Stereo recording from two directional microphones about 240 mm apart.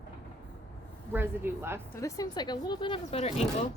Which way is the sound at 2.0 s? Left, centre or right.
Centre.